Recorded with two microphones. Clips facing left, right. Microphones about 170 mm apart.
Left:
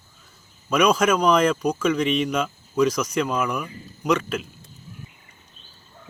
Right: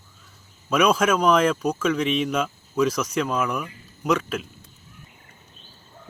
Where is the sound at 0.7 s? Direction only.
5° right (ahead or behind).